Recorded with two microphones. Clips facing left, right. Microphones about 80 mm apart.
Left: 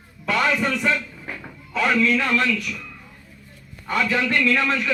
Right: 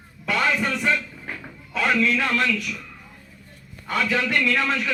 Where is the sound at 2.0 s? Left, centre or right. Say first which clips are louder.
Left 2 dB; centre.